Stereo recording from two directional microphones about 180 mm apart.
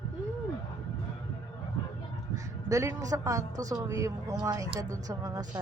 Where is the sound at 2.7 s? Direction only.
20° right (ahead or behind).